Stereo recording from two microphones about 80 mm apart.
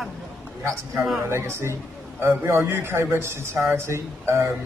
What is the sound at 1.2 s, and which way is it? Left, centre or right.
A man's voice, right.